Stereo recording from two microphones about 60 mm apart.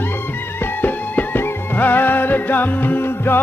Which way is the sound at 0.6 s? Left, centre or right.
Left.